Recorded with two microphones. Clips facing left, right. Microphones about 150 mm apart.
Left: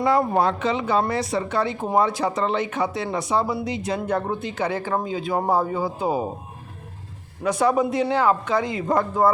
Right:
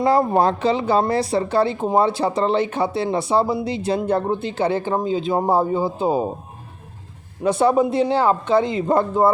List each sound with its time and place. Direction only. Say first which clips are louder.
0.0 s speech: right 3 dB; 35° right (ahead or behind)
7.4 s speech: right 3 dB; 30° right (ahead or behind)